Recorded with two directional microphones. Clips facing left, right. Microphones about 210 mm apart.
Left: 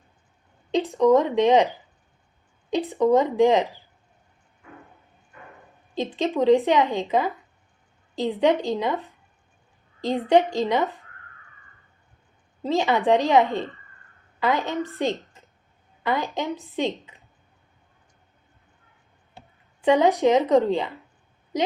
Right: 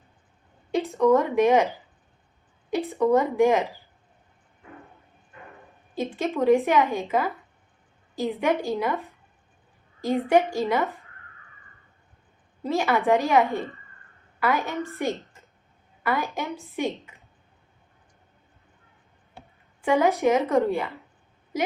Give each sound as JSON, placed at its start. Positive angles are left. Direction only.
{"t": 0.7, "sound": "speech", "side_deg": 15}
{"t": 6.0, "sound": "speech", "side_deg": 20}
{"t": 8.4, "sound": "speech", "side_deg": 15}
{"t": 12.6, "sound": "speech", "side_deg": 20}
{"t": 19.8, "sound": "speech", "side_deg": 15}